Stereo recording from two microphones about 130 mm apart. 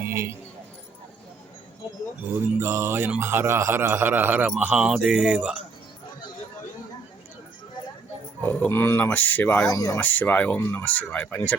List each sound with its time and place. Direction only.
0.0 s keys jangling: 20° right (ahead or behind)
2.3 s a man's voice: 20° right (ahead or behind)
8.4 s speech: 10° left (ahead or behind)
9.6 s speech: 25° left (ahead or behind)
10.0 s speech: 15° left (ahead or behind)